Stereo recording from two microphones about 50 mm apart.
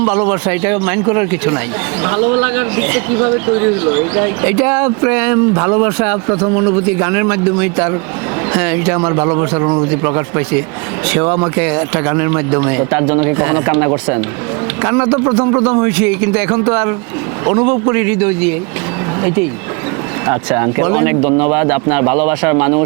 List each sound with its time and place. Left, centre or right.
0.0 s a man's voice: right
15.9 s speech: right
20.5 s speech: right